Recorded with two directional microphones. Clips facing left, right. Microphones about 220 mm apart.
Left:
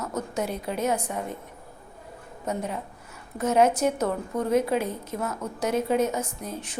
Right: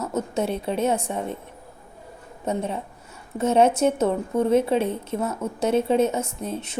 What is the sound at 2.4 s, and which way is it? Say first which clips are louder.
Speech: right 4 dB; 25° right (ahead or behind).